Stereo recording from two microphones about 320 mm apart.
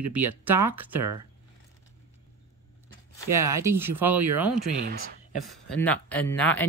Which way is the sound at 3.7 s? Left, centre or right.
Right.